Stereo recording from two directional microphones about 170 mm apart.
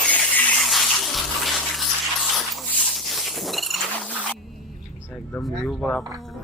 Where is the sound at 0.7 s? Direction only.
Centre (ahead or behind).